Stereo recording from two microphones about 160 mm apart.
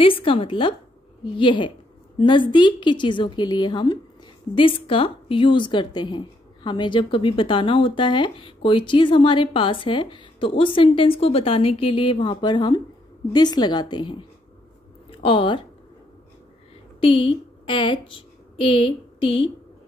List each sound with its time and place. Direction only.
0.0 s a woman's voice: 35° left (ahead or behind)
17.0 s a woman's voice: 35° left (ahead or behind)